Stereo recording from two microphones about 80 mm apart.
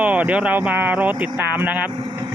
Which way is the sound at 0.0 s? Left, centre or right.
Centre.